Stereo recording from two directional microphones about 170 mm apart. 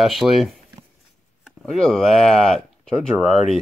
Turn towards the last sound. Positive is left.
turn(degrees=40)  # may be behind; listen again after turning